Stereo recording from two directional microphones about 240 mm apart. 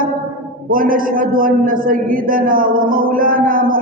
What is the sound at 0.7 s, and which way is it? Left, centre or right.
A man's voice, right.